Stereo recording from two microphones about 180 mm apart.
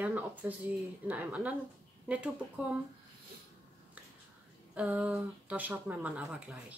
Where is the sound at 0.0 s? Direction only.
10° right (ahead or behind).